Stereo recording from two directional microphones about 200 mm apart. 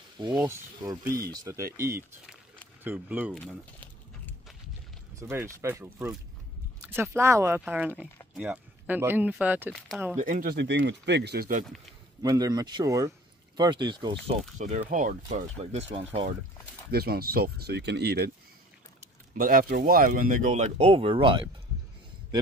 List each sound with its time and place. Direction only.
0.4 s speech: 15° right (ahead or behind)
3.3 s a sound: 5° left (ahead or behind)
5.3 s speech: 10° right (ahead or behind)
10.1 s speech: 40° right (ahead or behind)
12.2 s speech: 20° right (ahead or behind)
14.6 s speech: 35° right (ahead or behind)
16.9 s speech: 50° right (ahead or behind)
19.3 s speech: 45° right (ahead or behind); by 21.5 s 25° right (ahead or behind)